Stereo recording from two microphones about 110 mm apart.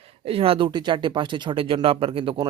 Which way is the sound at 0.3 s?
60° right (ahead or behind).